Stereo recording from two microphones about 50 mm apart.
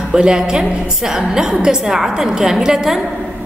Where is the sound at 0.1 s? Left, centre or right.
Centre.